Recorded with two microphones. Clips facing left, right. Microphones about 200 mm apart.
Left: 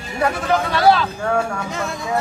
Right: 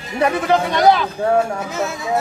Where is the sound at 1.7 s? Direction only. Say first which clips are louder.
Right 2 dB; centre (ahead or behind).